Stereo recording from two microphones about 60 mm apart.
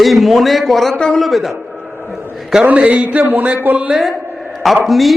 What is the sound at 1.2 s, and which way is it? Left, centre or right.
Speech, centre.